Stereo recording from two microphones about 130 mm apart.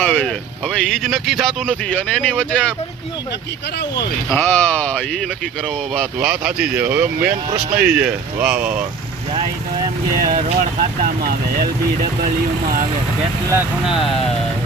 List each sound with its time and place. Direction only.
0.0 s speech: 10° left (ahead or behind)
4.3 s speech: 15° left (ahead or behind)
6.1 s speech: 5° right (ahead or behind)
10.2 s speech: 90° right